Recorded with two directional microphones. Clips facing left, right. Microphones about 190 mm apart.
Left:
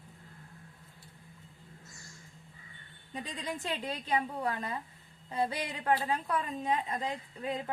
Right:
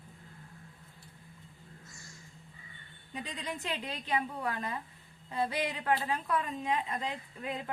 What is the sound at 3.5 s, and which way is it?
A woman's voice, 30° left (ahead or behind).